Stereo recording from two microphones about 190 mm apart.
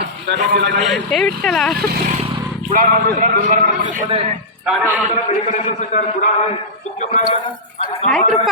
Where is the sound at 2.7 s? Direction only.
45° right (ahead or behind).